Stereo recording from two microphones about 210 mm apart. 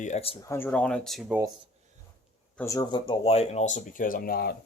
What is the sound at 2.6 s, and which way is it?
Speech, 15° left (ahead or behind).